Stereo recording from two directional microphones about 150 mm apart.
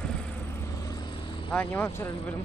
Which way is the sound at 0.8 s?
25° left (ahead or behind).